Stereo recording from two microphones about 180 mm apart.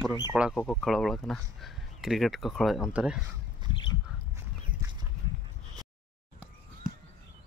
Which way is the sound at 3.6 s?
25° right (ahead or behind).